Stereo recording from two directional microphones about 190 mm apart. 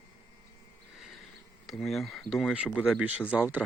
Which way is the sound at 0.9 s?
Centre (ahead or behind).